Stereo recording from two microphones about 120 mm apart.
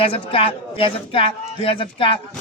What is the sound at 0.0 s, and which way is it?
Speech, 50° left (ahead or behind).